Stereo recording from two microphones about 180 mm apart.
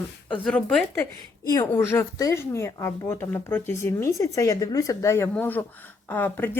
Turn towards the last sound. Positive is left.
turn(degrees=10)  # may be behind; listen again after turning